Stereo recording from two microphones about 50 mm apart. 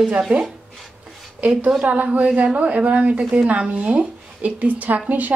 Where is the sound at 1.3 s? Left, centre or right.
Right.